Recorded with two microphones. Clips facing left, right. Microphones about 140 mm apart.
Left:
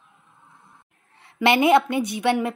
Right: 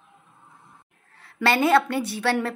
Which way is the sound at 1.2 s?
20° left (ahead or behind).